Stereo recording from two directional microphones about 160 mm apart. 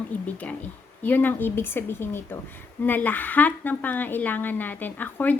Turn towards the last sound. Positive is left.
turn(degrees=10)  # may be behind; listen again after turning